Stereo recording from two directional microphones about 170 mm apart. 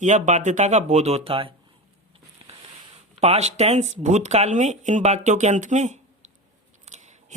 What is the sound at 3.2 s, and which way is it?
A woman's voice, 40° right (ahead or behind).